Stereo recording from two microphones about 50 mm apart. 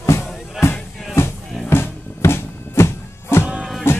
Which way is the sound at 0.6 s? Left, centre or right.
Centre.